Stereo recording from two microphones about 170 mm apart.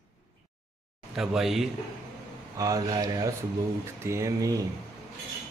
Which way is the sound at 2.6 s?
20° right (ahead or behind).